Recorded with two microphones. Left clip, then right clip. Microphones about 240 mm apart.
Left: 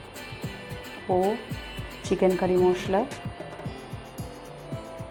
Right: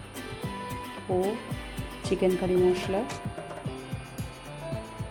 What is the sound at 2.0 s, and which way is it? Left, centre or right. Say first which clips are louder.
Speech: left 3 dB; centre.